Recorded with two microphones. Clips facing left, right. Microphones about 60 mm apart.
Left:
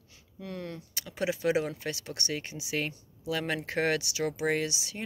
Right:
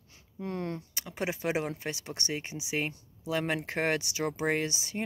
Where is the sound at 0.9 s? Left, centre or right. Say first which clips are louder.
Left 2 dB; right.